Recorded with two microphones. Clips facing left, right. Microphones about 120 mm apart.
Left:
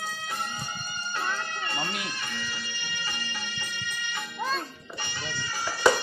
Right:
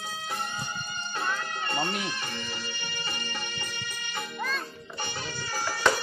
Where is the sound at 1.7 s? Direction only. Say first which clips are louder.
Right 3 dB; 35° right (ahead or behind).